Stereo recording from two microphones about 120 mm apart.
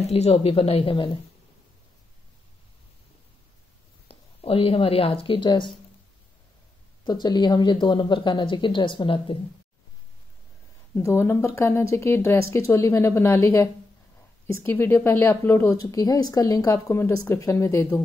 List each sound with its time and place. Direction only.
0.1 s speech: 60° left (ahead or behind)
4.1 s speech: 55° left (ahead or behind)
7.1 s a woman's voice: 35° left (ahead or behind)
11.0 s a woman's voice: 20° left (ahead or behind)